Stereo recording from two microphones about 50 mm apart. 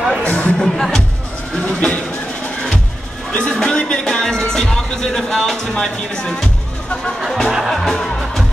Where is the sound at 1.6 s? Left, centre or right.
Left.